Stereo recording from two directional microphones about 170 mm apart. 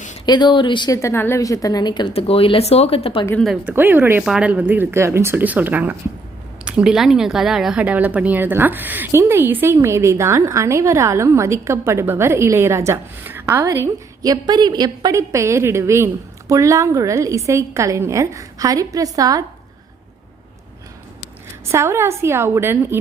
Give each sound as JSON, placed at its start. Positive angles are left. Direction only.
{"t": 0.3, "sound": "a woman's voice", "side_deg": 25}
{"t": 3.4, "sound": "a woman's voice", "side_deg": -5}
{"t": 21.7, "sound": "a woman's voice", "side_deg": -15}